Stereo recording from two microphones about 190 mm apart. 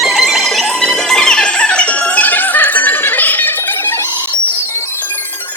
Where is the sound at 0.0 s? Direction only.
Centre (ahead or behind).